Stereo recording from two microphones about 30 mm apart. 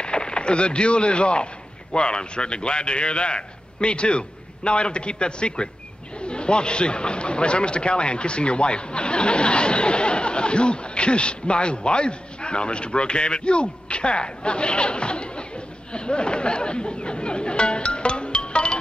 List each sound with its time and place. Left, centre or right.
0.0 s a man's voice: left
15.9 s chatter: left